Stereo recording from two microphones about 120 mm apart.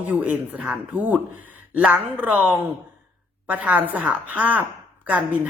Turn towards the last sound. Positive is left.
turn(degrees=-15)  # may be behind; listen again after turning